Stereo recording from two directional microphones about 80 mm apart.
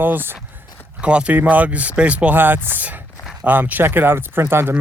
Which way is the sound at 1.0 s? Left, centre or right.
Centre.